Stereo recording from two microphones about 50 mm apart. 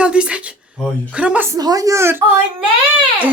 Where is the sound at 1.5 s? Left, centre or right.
Right.